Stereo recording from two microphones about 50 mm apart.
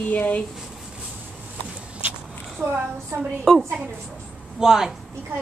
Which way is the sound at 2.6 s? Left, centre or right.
Right.